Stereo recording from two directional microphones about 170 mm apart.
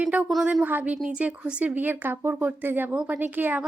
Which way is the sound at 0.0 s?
10° right (ahead or behind).